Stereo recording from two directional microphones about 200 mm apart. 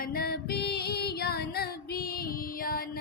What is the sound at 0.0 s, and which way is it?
Music, 50° left (ahead or behind).